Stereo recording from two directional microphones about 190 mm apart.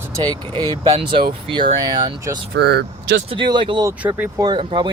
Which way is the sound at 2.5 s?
60° right (ahead or behind).